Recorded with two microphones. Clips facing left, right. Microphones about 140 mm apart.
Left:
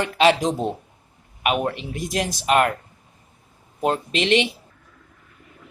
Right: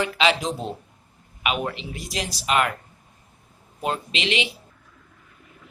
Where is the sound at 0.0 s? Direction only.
50° left (ahead or behind).